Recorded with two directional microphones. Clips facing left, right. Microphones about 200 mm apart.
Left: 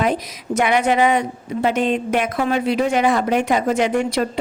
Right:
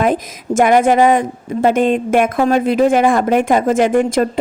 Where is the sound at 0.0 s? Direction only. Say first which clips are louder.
Right 4 dB; 50° right (ahead or behind).